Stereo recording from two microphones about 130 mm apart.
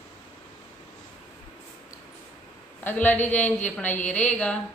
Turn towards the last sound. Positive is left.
turn(degrees=10)  # may be behind; listen again after turning